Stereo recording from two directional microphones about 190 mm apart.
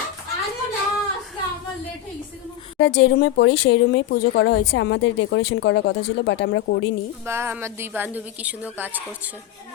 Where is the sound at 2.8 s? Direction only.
65° left (ahead or behind).